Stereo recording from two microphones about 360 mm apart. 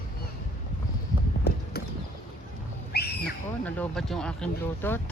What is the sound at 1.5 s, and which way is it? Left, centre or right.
Horse, left.